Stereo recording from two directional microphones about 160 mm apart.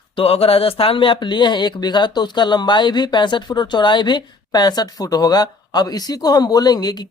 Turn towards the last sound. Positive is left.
turn(degrees=25)  # may be behind; listen again after turning